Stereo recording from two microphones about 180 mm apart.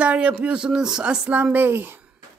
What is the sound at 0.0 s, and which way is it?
Speech, 5° right (ahead or behind).